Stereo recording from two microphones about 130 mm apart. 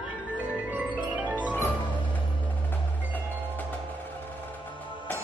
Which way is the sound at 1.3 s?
15° left (ahead or behind).